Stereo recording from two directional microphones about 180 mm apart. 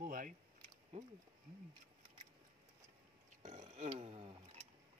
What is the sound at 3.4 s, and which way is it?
Burping, 40° right (ahead or behind).